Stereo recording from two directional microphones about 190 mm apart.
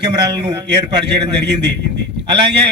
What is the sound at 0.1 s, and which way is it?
Speech, 20° right (ahead or behind).